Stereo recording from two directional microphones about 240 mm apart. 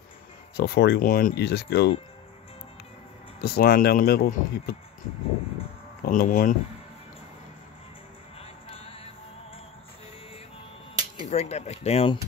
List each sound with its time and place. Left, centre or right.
0.6 s speech: left
3.3 s speech: left
6.0 s speech: left
8.4 s music: left
11.2 s speech: left